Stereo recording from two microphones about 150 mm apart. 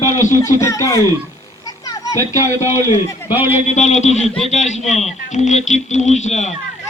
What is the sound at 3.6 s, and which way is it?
Speech, 50° left (ahead or behind).